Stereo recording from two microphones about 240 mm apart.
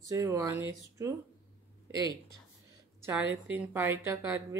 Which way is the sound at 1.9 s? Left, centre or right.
Centre.